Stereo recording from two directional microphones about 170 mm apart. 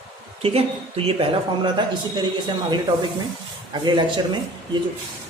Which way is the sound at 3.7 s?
25° right (ahead or behind).